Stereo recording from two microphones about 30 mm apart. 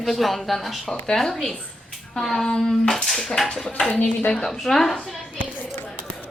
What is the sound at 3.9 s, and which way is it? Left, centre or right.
Speech, left.